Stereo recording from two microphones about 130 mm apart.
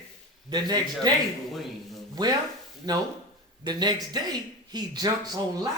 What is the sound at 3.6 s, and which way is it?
Speech, 35° right (ahead or behind).